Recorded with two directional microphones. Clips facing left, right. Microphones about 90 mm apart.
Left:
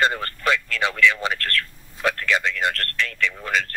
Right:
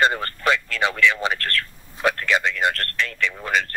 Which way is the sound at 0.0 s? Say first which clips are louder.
Right 2 dB; 30° right (ahead or behind).